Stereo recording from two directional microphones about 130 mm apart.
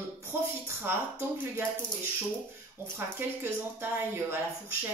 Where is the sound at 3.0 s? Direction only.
15° right (ahead or behind).